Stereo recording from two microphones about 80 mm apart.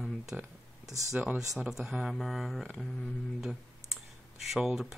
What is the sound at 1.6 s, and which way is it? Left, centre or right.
Speech, centre.